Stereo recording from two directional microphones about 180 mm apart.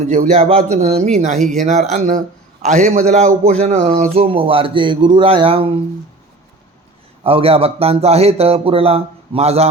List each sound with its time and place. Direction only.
0.0 s a man's voice: 40° right (ahead or behind)
1.4 s speech: centre (ahead or behind)
1.6 s a man's voice: 40° right (ahead or behind)
7.3 s a man's voice: 30° right (ahead or behind)